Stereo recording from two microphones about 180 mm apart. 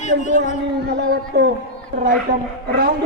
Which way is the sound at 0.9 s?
65° right (ahead or behind).